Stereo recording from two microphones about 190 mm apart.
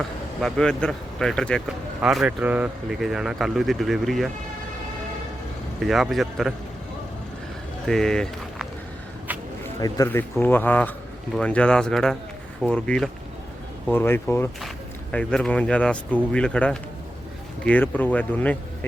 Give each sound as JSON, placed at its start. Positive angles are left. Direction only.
{"t": 0.4, "sound": "speech", "side_deg": 5}
{"t": 5.8, "sound": "speech", "side_deg": 0}
{"t": 7.9, "sound": "speech", "side_deg": 5}
{"t": 9.8, "sound": "speech", "side_deg": 15}